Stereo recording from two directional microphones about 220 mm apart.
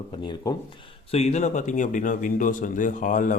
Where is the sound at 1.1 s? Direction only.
30° left (ahead or behind).